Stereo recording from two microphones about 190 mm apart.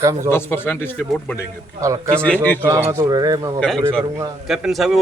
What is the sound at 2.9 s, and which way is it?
Speech, 15° right (ahead or behind).